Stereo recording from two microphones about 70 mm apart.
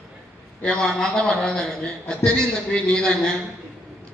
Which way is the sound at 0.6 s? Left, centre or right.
Centre.